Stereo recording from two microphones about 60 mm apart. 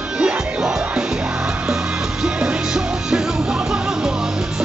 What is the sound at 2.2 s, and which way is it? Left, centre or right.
Music, centre.